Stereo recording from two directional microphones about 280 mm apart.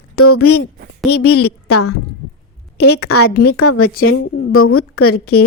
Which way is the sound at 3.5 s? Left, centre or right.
Left.